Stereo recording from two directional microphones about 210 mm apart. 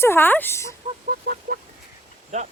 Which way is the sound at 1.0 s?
45° right (ahead or behind).